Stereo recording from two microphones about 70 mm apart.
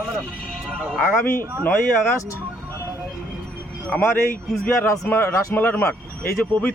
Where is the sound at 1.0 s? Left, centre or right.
Left.